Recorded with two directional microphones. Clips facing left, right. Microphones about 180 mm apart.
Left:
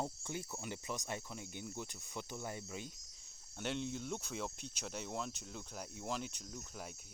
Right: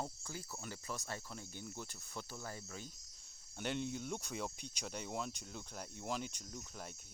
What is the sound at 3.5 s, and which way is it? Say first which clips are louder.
Speech: even; 5° right (ahead or behind).